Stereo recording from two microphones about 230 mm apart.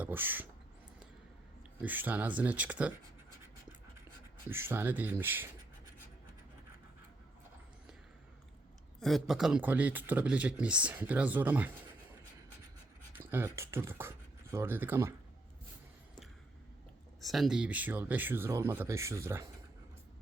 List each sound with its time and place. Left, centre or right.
0.0 s speech: centre
1.8 s speech: centre
4.4 s speech: centre
9.0 s speech: centre
13.1 s speech: centre
17.2 s speech: centre